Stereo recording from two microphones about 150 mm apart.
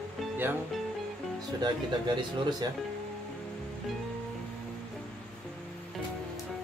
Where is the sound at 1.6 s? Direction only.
30° right (ahead or behind).